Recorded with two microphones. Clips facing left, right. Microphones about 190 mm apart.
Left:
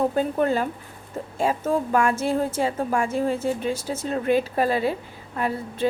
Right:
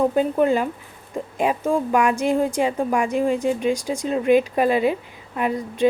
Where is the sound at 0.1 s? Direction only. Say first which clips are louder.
Right 3 dB; 15° right (ahead or behind).